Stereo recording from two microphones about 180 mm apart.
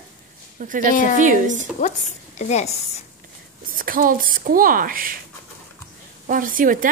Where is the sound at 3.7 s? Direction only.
50° right (ahead or behind).